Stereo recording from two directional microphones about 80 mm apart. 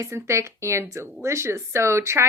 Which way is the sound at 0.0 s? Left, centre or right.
Right.